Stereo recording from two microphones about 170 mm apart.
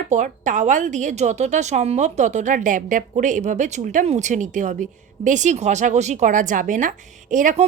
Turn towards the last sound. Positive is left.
turn(degrees=-45)  # may be behind; listen again after turning